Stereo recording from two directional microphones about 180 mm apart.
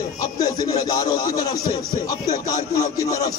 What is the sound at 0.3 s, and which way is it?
A man's voice, 20° left (ahead or behind).